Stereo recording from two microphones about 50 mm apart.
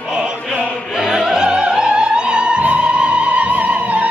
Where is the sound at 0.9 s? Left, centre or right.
Centre.